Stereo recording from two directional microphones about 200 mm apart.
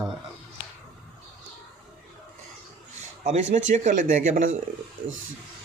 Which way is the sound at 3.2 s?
35° right (ahead or behind).